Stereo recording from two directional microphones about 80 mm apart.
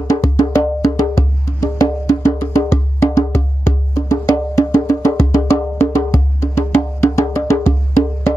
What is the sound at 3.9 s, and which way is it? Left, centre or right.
Wood block, left.